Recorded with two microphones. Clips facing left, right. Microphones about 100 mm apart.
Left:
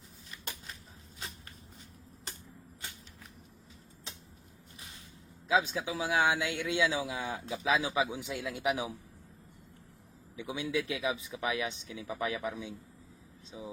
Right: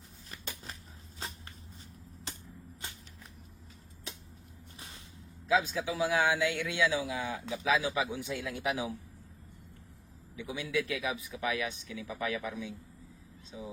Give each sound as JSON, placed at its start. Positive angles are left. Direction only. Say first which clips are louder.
{"t": 5.5, "sound": "a man's voice", "louder": "even", "side_deg": 20}
{"t": 10.3, "sound": "speech", "louder": "even", "side_deg": 20}